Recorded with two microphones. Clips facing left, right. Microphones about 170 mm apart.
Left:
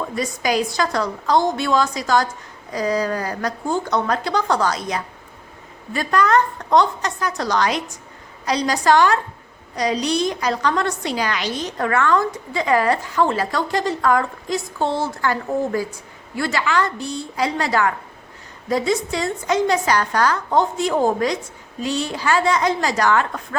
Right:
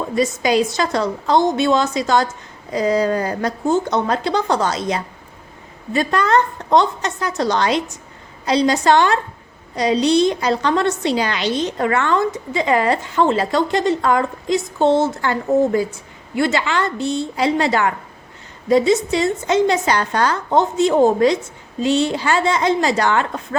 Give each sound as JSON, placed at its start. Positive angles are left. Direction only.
{"t": 0.2, "sound": "a woman's voice", "side_deg": -25}